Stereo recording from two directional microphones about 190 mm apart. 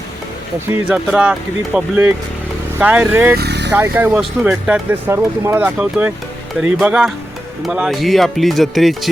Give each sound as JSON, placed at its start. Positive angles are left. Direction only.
{"t": 0.7, "sound": "speech", "side_deg": -5}
{"t": 3.3, "sound": "vehicle", "side_deg": -60}
{"t": 3.8, "sound": "speech", "side_deg": -10}